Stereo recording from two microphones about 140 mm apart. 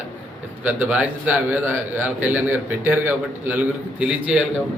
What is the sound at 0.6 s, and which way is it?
A man's voice, 10° right (ahead or behind).